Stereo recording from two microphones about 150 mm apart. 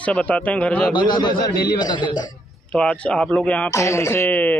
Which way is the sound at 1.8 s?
30° left (ahead or behind).